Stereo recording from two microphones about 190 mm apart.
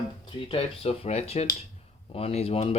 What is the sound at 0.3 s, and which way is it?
Speech, 25° left (ahead or behind).